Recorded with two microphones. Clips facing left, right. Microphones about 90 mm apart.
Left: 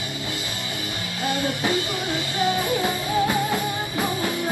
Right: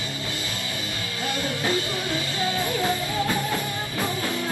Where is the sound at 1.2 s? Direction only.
20° left (ahead or behind).